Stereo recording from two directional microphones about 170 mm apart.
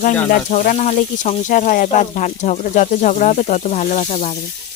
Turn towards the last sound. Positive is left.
turn(degrees=45)  # may be behind; listen again after turning